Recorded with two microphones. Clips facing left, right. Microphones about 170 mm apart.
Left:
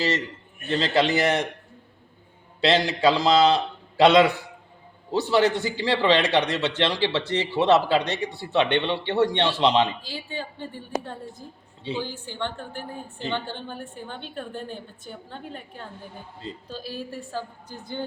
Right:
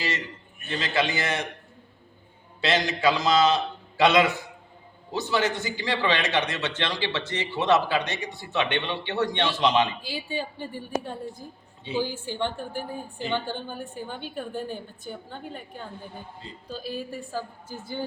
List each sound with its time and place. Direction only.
0.7 s a man's voice: 35° left (ahead or behind)
2.6 s a man's voice: 30° left (ahead or behind)
10.1 s a man's voice: 10° right (ahead or behind)
11.9 s a woman's voice: 10° right (ahead or behind)